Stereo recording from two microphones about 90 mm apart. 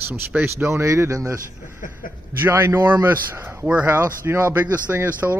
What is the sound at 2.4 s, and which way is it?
Speech, 30° right (ahead or behind).